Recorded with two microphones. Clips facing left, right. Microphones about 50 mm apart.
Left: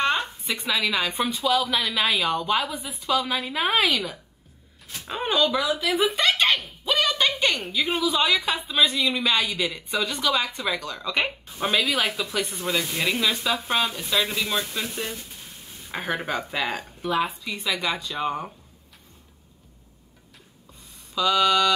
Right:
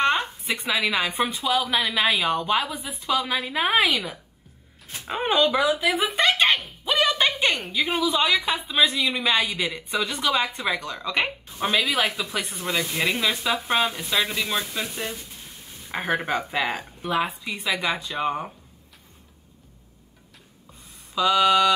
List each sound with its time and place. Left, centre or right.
0.0 s speech: centre
6.1 s a sound: centre
7.6 s speech: centre
21.1 s speech: centre